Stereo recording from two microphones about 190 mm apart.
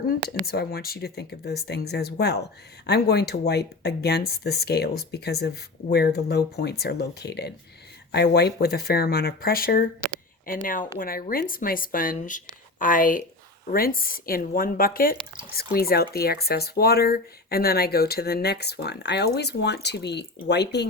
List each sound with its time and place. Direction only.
0.4 s speech: 55° left (ahead or behind)